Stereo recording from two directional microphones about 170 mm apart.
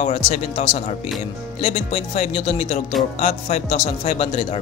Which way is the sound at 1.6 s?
40° left (ahead or behind).